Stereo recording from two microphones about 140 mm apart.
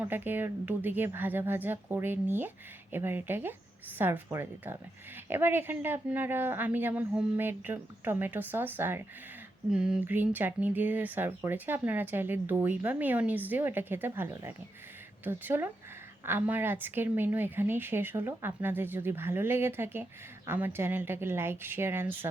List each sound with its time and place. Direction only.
0.0 s a woman's voice: 15° right (ahead or behind)
9.7 s a woman's voice: 5° right (ahead or behind)